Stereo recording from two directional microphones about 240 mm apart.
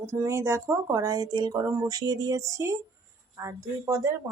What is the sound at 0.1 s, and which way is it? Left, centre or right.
Speech, centre.